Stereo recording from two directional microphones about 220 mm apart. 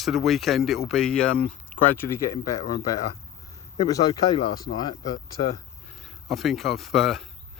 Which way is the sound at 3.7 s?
15° left (ahead or behind).